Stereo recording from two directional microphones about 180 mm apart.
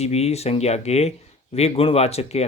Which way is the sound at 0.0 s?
35° left (ahead or behind).